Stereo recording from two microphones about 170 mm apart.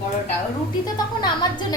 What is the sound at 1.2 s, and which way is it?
Speech, 25° left (ahead or behind).